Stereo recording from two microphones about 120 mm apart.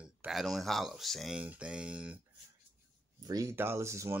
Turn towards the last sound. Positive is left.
turn(degrees=-25)  # may be behind; listen again after turning